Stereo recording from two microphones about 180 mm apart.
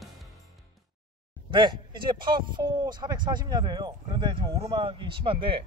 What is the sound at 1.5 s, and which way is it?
Speech, 25° right (ahead or behind).